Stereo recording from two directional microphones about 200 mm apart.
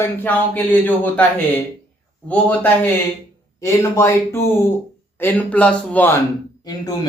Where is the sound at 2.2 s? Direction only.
10° left (ahead or behind).